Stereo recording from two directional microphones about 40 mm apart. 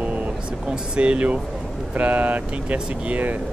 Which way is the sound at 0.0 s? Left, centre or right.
Right.